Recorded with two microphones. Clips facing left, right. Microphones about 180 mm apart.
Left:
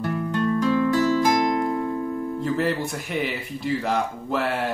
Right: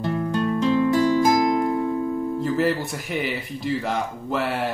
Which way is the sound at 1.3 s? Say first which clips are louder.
Right 2 dB; centre (ahead or behind).